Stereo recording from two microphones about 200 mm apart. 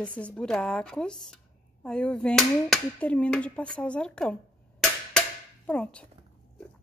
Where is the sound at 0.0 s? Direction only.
5° left (ahead or behind).